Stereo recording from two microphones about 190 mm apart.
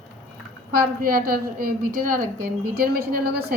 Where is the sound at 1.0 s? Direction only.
50° right (ahead or behind).